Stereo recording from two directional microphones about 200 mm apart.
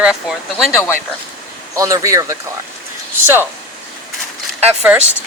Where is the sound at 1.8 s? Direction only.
15° right (ahead or behind).